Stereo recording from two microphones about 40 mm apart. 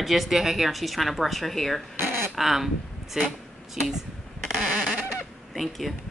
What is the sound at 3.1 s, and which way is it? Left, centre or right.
Speech, centre.